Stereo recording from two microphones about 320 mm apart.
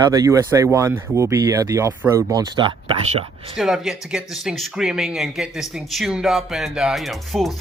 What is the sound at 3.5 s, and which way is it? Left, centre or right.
Speech, centre.